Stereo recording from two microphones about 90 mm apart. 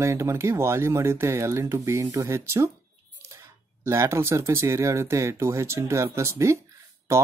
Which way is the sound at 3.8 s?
30° right (ahead or behind).